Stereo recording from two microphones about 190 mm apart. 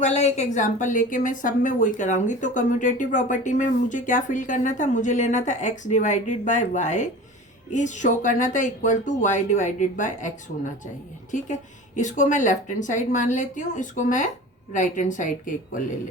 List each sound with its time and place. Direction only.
0.0 s a woman's voice: 35° left (ahead or behind)